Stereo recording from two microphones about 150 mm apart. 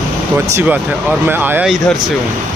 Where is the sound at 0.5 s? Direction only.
10° right (ahead or behind).